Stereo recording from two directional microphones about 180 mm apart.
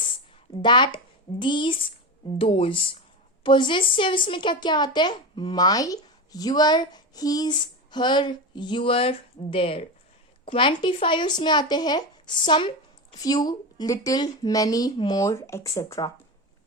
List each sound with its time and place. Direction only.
0.6 s a woman's voice: 25° left (ahead or behind)